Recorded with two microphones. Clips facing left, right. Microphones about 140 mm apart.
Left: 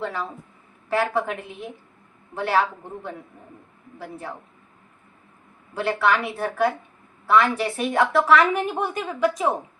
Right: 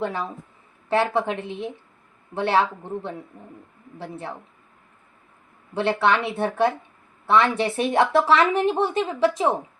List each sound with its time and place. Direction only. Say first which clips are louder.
0.0 s a woman's voice: right 2 dB; 20° right (ahead or behind)
3.9 s a woman's voice: right 2 dB; 25° right (ahead or behind)
5.7 s a woman's voice: right 1 dB; 25° right (ahead or behind)